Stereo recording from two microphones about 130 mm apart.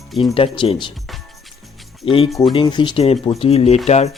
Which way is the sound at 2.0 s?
45° left (ahead or behind).